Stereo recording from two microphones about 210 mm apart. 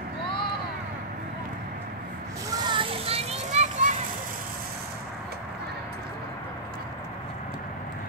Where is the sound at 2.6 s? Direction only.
25° right (ahead or behind).